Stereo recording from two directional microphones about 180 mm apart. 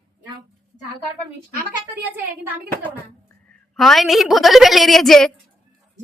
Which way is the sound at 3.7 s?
Centre (ahead or behind).